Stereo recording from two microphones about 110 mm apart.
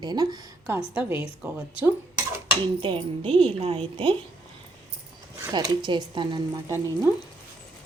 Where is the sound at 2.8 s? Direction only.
55° right (ahead or behind).